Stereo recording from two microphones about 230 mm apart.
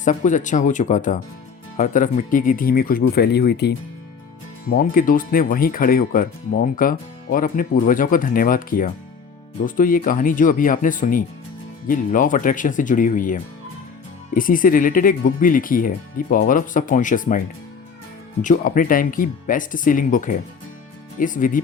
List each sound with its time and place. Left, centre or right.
0.0 s speech: left
18.4 s speech: left